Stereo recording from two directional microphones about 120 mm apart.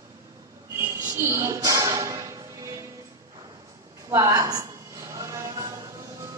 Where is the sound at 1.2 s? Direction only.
20° right (ahead or behind).